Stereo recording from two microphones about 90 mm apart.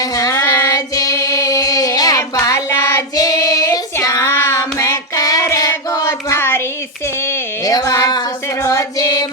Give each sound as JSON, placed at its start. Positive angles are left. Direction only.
{"t": 0.0, "sound": "child singing", "side_deg": 40}
{"t": 2.6, "sound": "child singing", "side_deg": 30}
{"t": 3.2, "sound": "child singing", "side_deg": 40}
{"t": 6.1, "sound": "a sound", "side_deg": 30}
{"t": 7.6, "sound": "a sound", "side_deg": 40}
{"t": 8.6, "sound": "music", "side_deg": 35}